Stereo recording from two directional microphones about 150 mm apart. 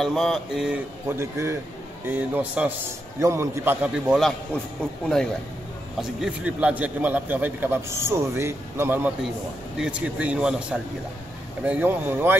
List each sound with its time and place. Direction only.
0.0 s speech: centre (ahead or behind)
1.0 s a man's voice: 15° right (ahead or behind); by 5.3 s 5° left (ahead or behind)
5.9 s a man's voice: 5° right (ahead or behind)